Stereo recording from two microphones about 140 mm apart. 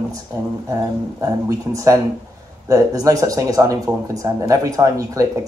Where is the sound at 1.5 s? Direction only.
25° right (ahead or behind).